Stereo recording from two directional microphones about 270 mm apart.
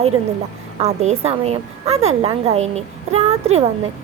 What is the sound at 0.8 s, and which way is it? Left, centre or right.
A woman's voice, right.